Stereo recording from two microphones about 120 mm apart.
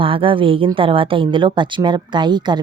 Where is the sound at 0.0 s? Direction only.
50° right (ahead or behind).